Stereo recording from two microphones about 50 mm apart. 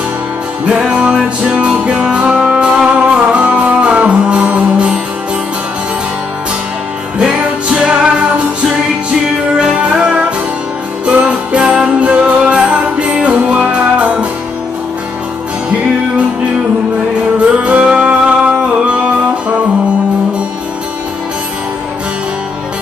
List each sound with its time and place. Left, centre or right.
0.7 s music: right
7.2 s music: right
9.8 s music: right
17.6 s music: right